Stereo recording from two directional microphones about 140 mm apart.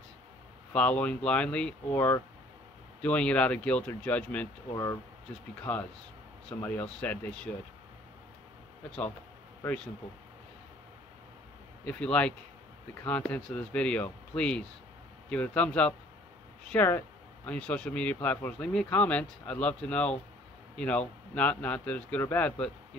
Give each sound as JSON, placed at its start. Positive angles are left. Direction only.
{"t": 0.7, "sound": "speech", "side_deg": 10}
{"t": 2.0, "sound": "speech", "side_deg": 20}
{"t": 5.6, "sound": "speech", "side_deg": 10}
{"t": 11.8, "sound": "a man's voice", "side_deg": 10}